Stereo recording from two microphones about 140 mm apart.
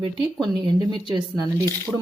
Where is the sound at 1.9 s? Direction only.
5° right (ahead or behind).